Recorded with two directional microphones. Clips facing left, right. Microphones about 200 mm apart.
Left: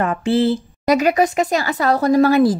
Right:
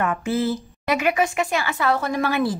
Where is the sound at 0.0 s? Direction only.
30° left (ahead or behind).